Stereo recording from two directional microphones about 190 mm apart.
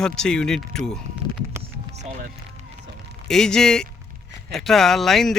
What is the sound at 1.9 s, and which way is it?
Music, 35° right (ahead or behind).